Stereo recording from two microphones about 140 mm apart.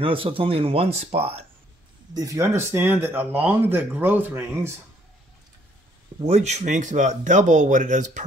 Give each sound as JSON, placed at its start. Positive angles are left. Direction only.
{"t": 0.0, "sound": "speech", "side_deg": -40}
{"t": 2.1, "sound": "speech", "side_deg": -20}
{"t": 6.2, "sound": "speech", "side_deg": -55}